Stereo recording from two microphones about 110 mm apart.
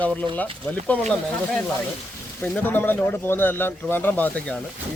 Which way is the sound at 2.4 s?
20° left (ahead or behind).